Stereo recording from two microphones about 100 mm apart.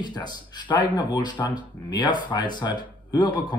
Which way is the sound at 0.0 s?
45° left (ahead or behind).